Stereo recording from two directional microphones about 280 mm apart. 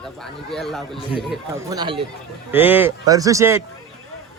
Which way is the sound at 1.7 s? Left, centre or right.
Centre.